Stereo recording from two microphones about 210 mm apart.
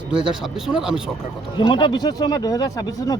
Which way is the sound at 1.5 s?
20° left (ahead or behind).